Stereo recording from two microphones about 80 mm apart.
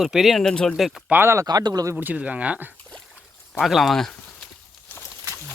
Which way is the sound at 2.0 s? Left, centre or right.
Centre.